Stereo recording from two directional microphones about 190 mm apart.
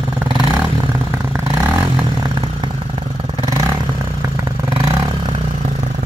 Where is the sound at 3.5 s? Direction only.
20° right (ahead or behind).